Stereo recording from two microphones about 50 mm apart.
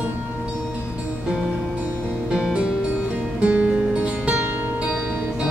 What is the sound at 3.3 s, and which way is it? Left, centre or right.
Music, right.